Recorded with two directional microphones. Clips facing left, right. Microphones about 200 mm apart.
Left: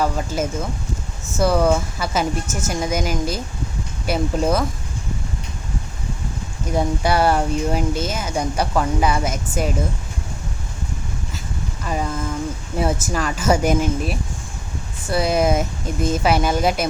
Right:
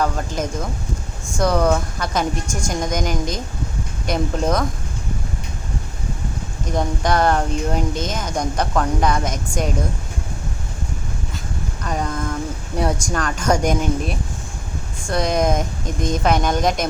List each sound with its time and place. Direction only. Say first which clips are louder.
0.0 s a woman's voice: left 1 dB; 5° left (ahead or behind)
6.7 s speech: left 1 dB; 10° left (ahead or behind)
11.8 s a woman's voice: even; 5° left (ahead or behind)